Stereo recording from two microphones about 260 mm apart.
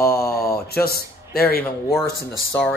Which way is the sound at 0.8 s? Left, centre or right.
Left.